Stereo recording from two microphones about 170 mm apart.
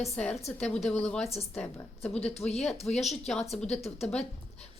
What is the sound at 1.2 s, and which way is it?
Speech, 35° left (ahead or behind).